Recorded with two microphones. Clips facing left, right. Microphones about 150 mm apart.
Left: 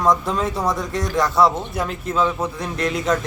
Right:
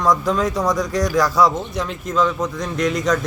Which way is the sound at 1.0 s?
25° left (ahead or behind).